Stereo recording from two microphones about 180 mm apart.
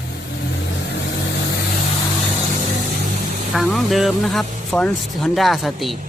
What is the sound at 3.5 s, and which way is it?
Speech, centre (ahead or behind).